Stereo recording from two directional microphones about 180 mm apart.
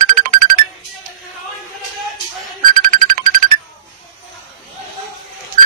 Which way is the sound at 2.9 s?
50° right (ahead or behind).